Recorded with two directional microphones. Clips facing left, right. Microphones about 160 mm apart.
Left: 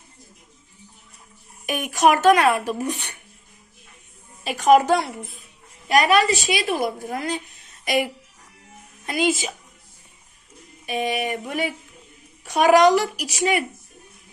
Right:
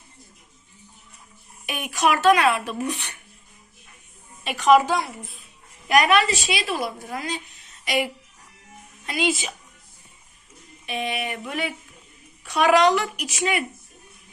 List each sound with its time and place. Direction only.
1.6 s speech: 45° left (ahead or behind)
4.4 s speech: 45° left (ahead or behind)
5.9 s speech: 35° left (ahead or behind)
6.5 s speech: 50° left (ahead or behind)
10.8 s speech: 40° left (ahead or behind)